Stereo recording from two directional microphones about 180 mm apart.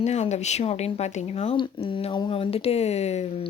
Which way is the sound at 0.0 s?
40° left (ahead or behind).